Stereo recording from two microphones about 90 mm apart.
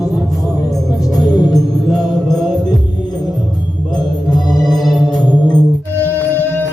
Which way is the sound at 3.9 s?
50° left (ahead or behind).